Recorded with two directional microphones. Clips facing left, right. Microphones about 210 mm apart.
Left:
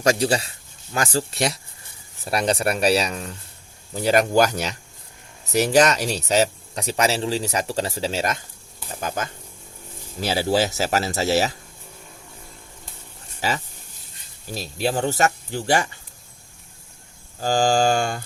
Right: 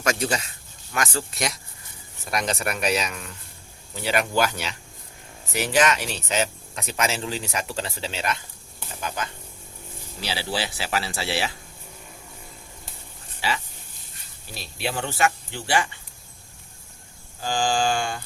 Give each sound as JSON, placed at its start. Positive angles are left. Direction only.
{"t": 0.0, "sound": "speech", "side_deg": 35}
{"t": 13.4, "sound": "speech", "side_deg": 45}
{"t": 17.4, "sound": "speech", "side_deg": 40}